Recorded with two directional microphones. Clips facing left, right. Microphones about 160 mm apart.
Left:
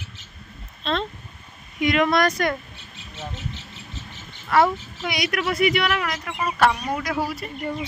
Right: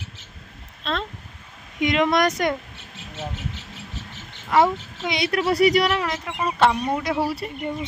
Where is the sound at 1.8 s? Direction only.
20° right (ahead or behind).